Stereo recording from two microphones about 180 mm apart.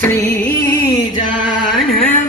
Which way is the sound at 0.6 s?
15° left (ahead or behind).